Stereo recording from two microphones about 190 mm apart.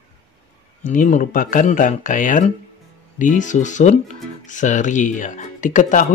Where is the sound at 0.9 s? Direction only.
40° left (ahead or behind).